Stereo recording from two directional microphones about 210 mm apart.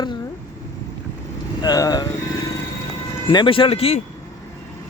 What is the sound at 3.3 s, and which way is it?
Speech, 25° left (ahead or behind).